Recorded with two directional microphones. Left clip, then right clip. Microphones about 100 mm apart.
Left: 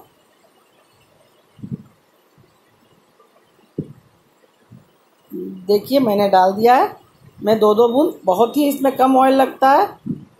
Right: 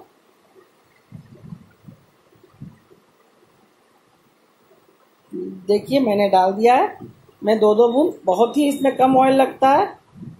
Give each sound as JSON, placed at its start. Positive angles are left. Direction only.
{"t": 5.7, "sound": "speech", "side_deg": 30}